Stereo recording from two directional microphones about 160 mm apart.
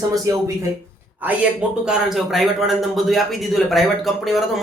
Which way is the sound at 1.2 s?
5° right (ahead or behind).